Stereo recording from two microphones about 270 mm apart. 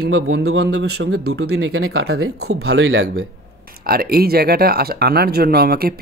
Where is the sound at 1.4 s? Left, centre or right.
Right.